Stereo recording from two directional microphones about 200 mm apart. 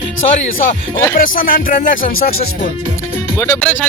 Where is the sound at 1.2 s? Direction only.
45° left (ahead or behind).